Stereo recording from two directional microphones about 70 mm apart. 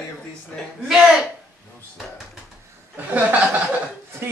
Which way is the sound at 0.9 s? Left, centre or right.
Centre.